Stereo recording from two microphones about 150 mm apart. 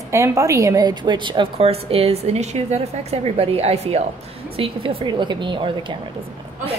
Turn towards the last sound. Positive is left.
turn(degrees=-30)  # may be behind; listen again after turning